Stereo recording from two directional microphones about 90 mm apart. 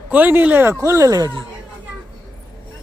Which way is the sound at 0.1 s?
20° right (ahead or behind).